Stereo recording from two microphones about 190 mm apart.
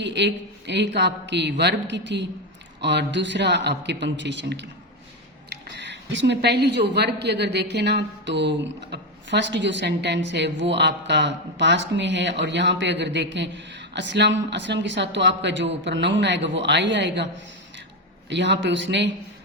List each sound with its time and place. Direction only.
0.0 s a woman's voice: 65° right (ahead or behind)
18.3 s a woman's voice: 70° right (ahead or behind)